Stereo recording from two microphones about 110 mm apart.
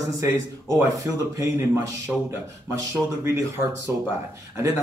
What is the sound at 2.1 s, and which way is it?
Speech, 5° right (ahead or behind).